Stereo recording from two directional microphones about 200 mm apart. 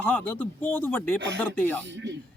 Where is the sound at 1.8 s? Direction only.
60° right (ahead or behind).